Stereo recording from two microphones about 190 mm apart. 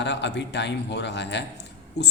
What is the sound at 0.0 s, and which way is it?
A woman's voice, 65° left (ahead or behind).